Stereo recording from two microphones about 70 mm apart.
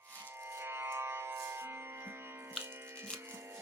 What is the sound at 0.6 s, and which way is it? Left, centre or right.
Music, right.